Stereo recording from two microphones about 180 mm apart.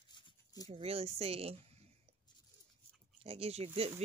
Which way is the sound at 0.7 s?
35° right (ahead or behind).